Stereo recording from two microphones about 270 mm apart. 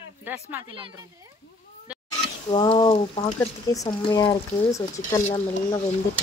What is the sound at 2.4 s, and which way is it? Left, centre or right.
Speech, centre.